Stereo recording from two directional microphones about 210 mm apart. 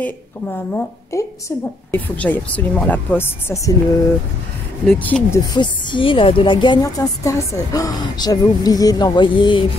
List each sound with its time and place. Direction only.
0.0 s speech: 10° left (ahead or behind)
4.8 s speech: 5° left (ahead or behind)
5.5 s a woman's voice: 20° left (ahead or behind)